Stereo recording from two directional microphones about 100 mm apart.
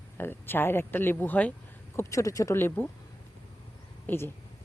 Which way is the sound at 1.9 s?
35° left (ahead or behind).